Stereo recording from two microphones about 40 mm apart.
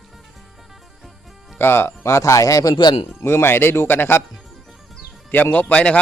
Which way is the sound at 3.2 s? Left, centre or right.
Left.